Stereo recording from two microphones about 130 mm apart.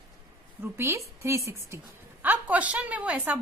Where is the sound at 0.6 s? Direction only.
20° right (ahead or behind).